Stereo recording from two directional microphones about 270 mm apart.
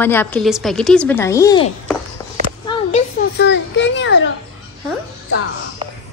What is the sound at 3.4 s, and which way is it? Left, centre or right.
Children playing, left.